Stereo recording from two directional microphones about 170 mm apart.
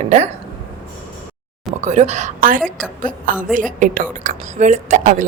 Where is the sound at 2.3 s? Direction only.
55° right (ahead or behind).